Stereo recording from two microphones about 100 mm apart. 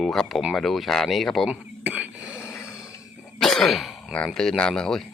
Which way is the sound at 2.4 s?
30° left (ahead or behind).